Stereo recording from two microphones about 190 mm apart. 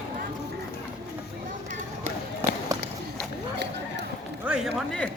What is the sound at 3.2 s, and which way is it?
Run, 60° right (ahead or behind).